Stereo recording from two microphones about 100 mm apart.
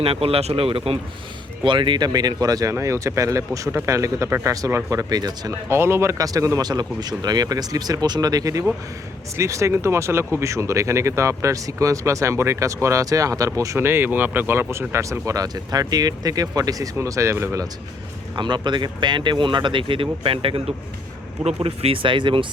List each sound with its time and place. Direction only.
0.0 s speech: 70° right (ahead or behind)
1.6 s speech: 55° right (ahead or behind)
5.6 s speech: 25° right (ahead or behind)
18.3 s speech: 50° right (ahead or behind); by 20.7 s 65° right (ahead or behind)
21.4 s speech: 85° right; by 22.4 s 55° right (ahead or behind)